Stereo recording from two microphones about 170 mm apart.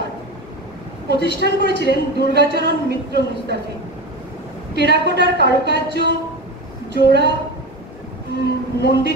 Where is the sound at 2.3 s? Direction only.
75° right (ahead or behind).